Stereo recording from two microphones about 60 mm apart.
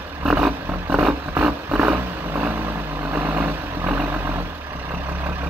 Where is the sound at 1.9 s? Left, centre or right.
Right.